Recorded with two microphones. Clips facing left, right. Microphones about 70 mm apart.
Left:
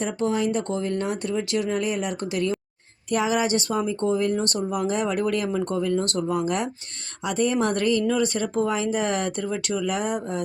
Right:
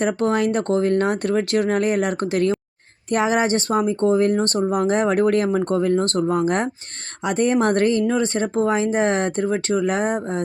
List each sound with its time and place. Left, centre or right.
0.0 s speech: right